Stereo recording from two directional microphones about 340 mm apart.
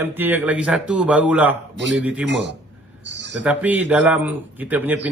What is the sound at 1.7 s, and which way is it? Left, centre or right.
Speech, right.